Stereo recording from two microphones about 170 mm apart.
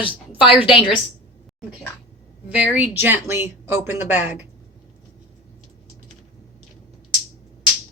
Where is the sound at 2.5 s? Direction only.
10° right (ahead or behind).